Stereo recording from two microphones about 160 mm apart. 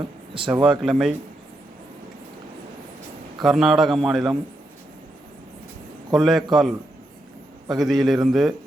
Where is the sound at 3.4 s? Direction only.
Centre (ahead or behind).